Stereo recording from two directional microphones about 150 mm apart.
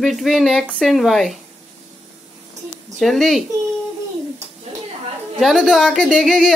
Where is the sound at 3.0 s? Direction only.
Centre (ahead or behind).